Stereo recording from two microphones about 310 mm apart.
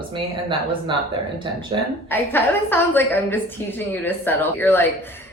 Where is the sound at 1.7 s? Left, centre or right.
Centre.